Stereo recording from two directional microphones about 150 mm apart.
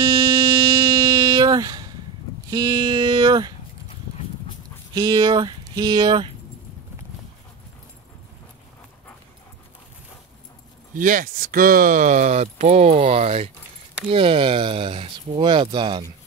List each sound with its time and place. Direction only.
0.0 s music: 20° right (ahead or behind)
2.5 s speech: 30° right (ahead or behind)
4.9 s speech: 25° right (ahead or behind)
11.0 s speech: 60° right (ahead or behind); by 16.1 s 30° right (ahead or behind)